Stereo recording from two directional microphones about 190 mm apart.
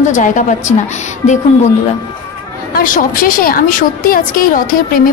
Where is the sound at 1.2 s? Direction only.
40° left (ahead or behind).